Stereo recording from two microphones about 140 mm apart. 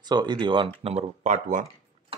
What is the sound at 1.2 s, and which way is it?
Speech, 65° right (ahead or behind).